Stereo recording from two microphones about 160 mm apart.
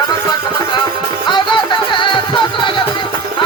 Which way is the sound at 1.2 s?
30° left (ahead or behind).